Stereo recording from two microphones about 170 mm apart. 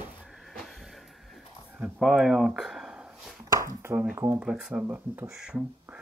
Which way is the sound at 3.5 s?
15° right (ahead or behind).